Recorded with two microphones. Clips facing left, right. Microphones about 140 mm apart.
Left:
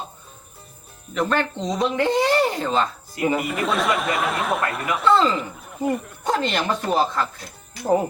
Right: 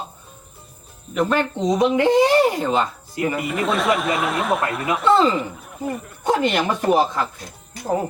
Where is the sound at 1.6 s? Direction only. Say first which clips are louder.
Right 8 dB; 20° right (ahead or behind).